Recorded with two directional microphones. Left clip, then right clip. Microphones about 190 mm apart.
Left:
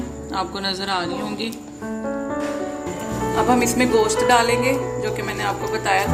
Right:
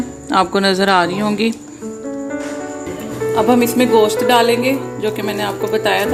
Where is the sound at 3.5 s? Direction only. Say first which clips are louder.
Right 5 dB; 35° right (ahead or behind).